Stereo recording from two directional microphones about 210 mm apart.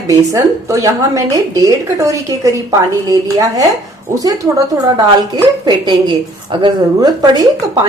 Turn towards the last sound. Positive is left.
turn(degrees=-20)  # may be behind; listen again after turning